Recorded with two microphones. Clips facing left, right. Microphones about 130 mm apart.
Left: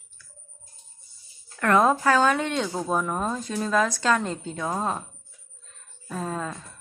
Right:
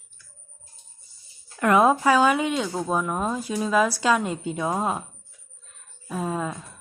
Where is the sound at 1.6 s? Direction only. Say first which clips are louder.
Right 2 dB; 10° right (ahead or behind).